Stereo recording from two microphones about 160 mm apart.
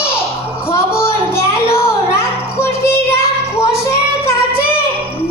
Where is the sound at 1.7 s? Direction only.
15° left (ahead or behind).